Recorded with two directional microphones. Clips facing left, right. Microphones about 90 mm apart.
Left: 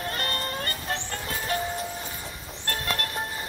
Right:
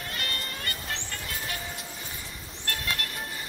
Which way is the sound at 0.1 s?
40° left (ahead or behind).